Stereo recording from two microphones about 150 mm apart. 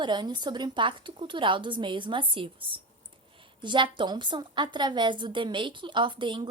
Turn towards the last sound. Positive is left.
turn(degrees=-30)  # may be behind; listen again after turning